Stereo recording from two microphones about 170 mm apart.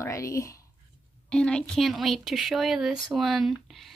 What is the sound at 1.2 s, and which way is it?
A woman's voice, 5° left (ahead or behind).